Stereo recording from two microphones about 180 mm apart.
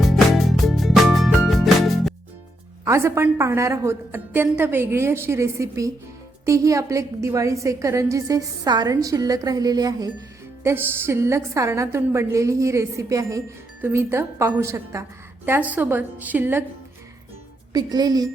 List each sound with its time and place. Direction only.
0.0 s music: centre (ahead or behind)
2.8 s a woman's voice: 15° right (ahead or behind)
17.7 s a woman's voice: 20° right (ahead or behind)